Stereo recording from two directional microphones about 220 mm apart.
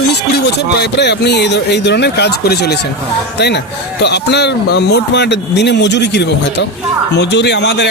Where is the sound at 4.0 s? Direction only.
50° left (ahead or behind).